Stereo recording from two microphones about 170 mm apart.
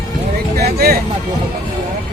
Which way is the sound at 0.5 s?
60° right (ahead or behind).